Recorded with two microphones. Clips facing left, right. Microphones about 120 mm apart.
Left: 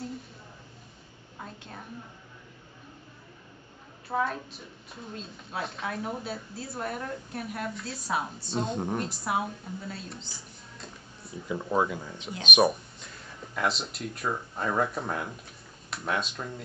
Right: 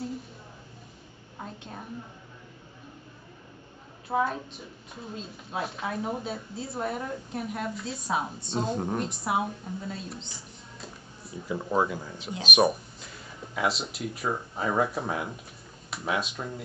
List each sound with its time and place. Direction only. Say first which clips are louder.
1.4 s a sound: right 3 dB; 15° right (ahead or behind)
4.1 s a woman's voice: right 2 dB; centre (ahead or behind)
5.6 s a woman's voice: right 2 dB; centre (ahead or behind)
11.4 s a woman's voice: right 1 dB; 5° right (ahead or behind)